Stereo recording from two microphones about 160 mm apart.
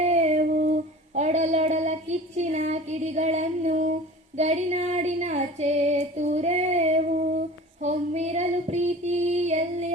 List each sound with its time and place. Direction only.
0.1 s humming: 45° right (ahead or behind)
0.4 s a sound: 50° right (ahead or behind)
4.4 s female singing: 45° right (ahead or behind)